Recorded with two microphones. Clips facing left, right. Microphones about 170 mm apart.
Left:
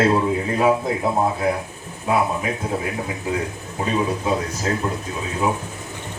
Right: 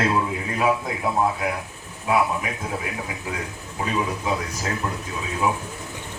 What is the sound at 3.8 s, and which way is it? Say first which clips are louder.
Speech: left 4 dB; 30° left (ahead or behind).